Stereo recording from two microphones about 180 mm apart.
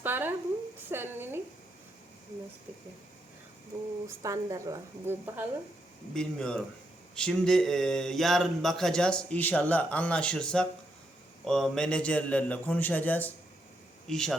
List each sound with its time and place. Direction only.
0.0 s a sound: 10° right (ahead or behind)
4.0 s a woman's voice: 15° right (ahead or behind)
6.1 s a man's voice: 5° left (ahead or behind)